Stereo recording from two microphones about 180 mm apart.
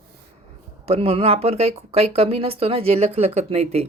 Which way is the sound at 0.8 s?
35° right (ahead or behind).